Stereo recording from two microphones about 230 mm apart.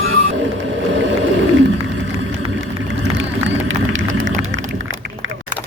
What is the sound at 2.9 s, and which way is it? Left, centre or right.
Vehicle, right.